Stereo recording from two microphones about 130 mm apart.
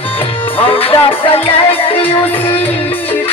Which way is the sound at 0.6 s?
45° left (ahead or behind).